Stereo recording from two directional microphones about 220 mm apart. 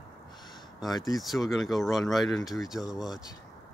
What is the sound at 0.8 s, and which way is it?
Speech, centre (ahead or behind).